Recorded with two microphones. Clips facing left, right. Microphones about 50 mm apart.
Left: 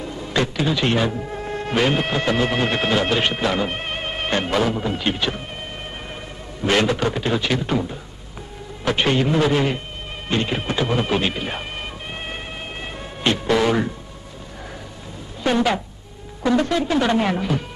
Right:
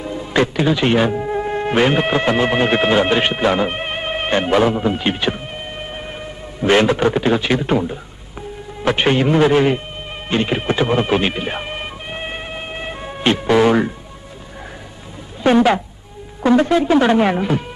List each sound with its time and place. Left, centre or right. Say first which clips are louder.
0.0 s a man's voice: right 5 dB; centre
6.6 s a man's voice: right 5 dB; right
10.3 s music: right 4 dB; centre
15.5 s a man's voice: right 6 dB; right